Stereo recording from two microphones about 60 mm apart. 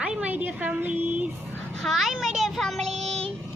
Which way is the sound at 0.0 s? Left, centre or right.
Right.